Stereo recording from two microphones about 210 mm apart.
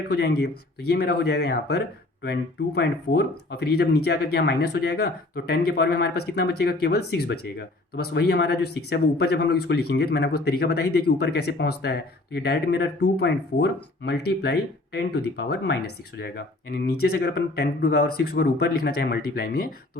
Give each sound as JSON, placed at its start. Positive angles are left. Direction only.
{"t": 0.1, "sound": "speech", "side_deg": 50}